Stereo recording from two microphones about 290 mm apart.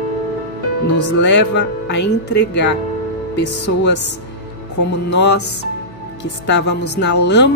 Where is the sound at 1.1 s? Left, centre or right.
Left.